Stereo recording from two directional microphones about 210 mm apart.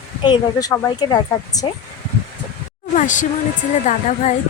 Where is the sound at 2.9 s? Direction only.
35° left (ahead or behind).